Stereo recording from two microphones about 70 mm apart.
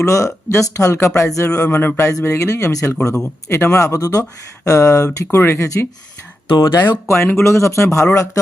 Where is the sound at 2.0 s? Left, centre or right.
Left.